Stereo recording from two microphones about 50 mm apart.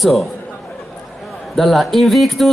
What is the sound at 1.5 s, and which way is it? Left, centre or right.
Speech, centre.